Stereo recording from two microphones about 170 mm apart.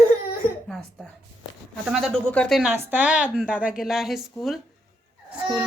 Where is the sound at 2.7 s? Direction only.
10° right (ahead or behind).